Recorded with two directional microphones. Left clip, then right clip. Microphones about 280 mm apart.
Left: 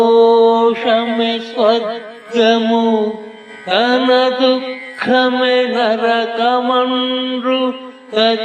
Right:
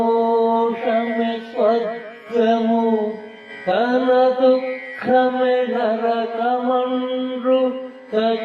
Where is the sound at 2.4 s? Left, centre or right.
Left.